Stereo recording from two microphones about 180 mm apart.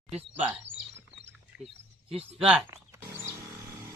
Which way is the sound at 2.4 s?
5° right (ahead or behind).